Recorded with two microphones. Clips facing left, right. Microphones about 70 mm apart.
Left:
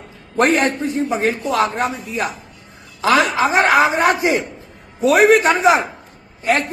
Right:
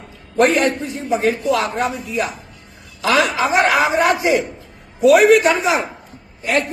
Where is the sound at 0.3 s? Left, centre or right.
Left.